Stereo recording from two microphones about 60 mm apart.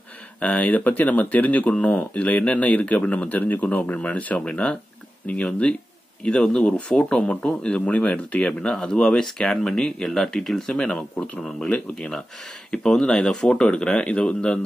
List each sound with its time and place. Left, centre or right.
0.4 s speech: left